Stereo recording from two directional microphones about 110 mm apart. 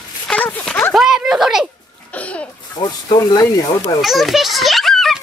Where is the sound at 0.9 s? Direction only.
5° right (ahead or behind).